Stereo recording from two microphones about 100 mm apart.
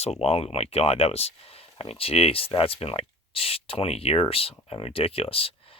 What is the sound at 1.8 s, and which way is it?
Speech, 70° left (ahead or behind).